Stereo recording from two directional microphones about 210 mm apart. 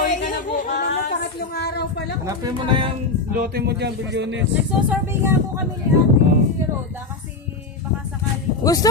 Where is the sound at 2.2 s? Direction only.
20° right (ahead or behind).